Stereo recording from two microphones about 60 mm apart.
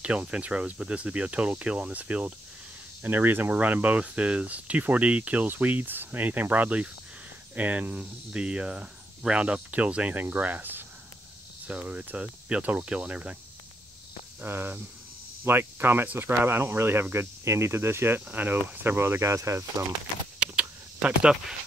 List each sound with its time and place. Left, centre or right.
0.0 s speech: centre
3.0 s speech: right
14.4 s speech: right
18.3 s speech: right
20.3 s a sound: centre